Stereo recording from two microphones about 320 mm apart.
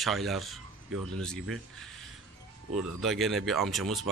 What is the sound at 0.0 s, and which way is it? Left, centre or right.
Speech, centre.